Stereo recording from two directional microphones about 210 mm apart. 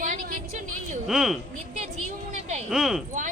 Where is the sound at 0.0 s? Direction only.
40° right (ahead or behind).